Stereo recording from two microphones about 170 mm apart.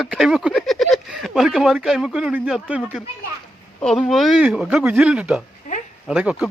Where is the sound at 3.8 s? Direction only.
Centre (ahead or behind).